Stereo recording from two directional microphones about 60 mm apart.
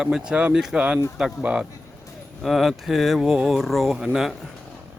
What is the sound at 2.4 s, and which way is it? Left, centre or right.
Speech, centre.